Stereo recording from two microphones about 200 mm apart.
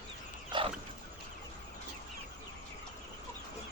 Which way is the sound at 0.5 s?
25° right (ahead or behind).